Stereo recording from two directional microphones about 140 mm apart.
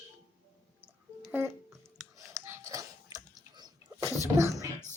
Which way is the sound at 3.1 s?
30° right (ahead or behind).